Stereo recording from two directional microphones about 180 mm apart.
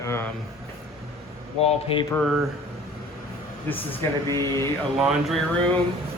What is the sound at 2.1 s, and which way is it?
Speech, centre (ahead or behind).